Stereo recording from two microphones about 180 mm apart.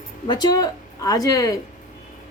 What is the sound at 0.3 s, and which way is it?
A woman's voice, 20° left (ahead or behind).